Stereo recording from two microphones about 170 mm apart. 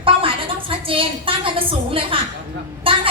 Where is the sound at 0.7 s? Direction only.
30° right (ahead or behind).